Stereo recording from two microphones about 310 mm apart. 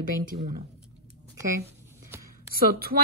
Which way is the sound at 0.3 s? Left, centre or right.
Right.